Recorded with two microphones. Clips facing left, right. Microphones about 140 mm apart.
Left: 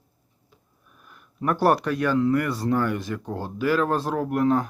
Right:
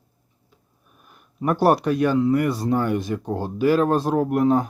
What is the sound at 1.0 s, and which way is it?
A man's voice, 20° right (ahead or behind).